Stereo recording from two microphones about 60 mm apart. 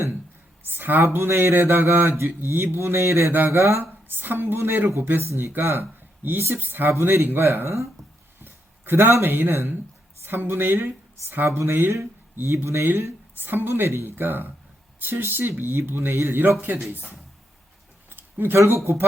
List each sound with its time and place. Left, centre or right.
0.6 s a man's voice: right
4.2 s a man's voice: right
6.9 s a man's voice: right
18.1 s a sound: right